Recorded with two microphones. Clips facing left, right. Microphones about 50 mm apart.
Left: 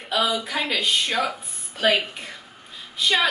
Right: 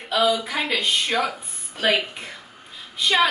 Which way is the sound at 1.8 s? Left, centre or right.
Centre.